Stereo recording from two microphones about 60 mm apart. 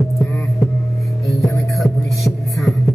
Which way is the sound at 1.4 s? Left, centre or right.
Centre.